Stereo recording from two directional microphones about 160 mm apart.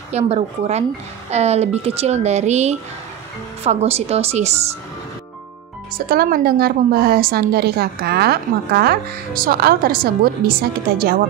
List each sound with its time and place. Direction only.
0.1 s a woman's voice: 45° right (ahead or behind)
6.0 s a woman's voice: 65° right (ahead or behind)